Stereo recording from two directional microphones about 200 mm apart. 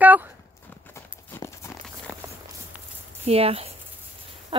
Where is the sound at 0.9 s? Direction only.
15° left (ahead or behind).